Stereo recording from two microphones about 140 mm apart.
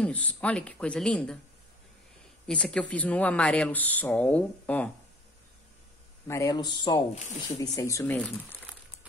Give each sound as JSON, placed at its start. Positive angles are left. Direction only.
{"t": 0.0, "sound": "speech", "side_deg": 10}
{"t": 2.4, "sound": "speech", "side_deg": 5}
{"t": 6.2, "sound": "a man's voice", "side_deg": 20}